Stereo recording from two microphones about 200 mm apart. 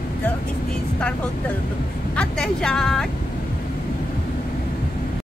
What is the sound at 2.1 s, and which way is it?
Speech, 5° left (ahead or behind).